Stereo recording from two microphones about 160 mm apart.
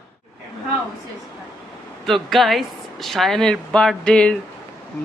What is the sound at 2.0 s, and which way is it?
Speech, centre (ahead or behind).